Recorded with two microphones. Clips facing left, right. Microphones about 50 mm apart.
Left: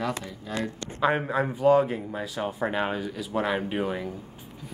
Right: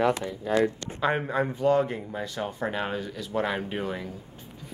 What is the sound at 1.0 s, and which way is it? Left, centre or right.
A man's voice, centre.